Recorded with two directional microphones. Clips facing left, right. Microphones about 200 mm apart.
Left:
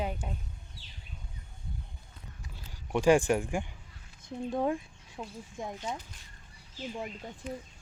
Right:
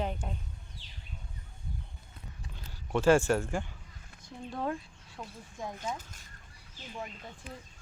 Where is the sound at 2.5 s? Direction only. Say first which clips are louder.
Even; 15° left (ahead or behind).